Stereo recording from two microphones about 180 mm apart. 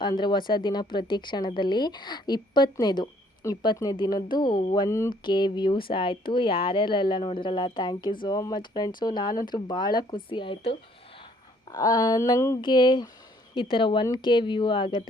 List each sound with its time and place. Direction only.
0.0 s speech: 25° left (ahead or behind)